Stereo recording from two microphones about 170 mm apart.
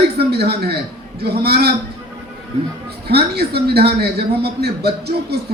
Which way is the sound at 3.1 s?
70° right (ahead or behind).